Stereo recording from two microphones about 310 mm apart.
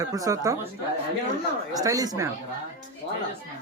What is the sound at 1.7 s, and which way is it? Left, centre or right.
Speech, centre.